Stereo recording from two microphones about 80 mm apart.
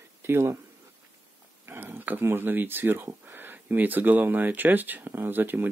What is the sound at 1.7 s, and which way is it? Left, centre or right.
Speech, right.